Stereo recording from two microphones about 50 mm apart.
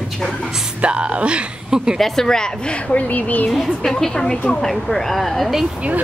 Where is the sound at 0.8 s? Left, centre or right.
Right.